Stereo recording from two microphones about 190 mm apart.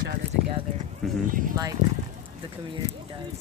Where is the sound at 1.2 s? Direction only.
45° right (ahead or behind).